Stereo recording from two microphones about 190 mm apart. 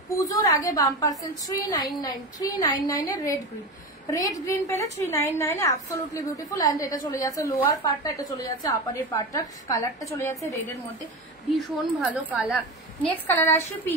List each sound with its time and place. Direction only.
0.2 s a woman's voice: 20° left (ahead or behind)
11.5 s a woman's voice: 5° right (ahead or behind)
13.0 s a woman's voice: 10° left (ahead or behind)